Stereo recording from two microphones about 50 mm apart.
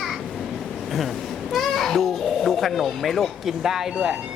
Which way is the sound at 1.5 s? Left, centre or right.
Centre.